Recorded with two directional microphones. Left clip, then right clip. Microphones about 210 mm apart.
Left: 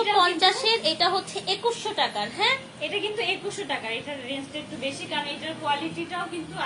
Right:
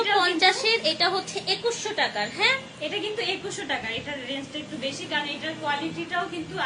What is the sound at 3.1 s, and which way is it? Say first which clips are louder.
A woman's voice: left 1 dB; 15° right (ahead or behind).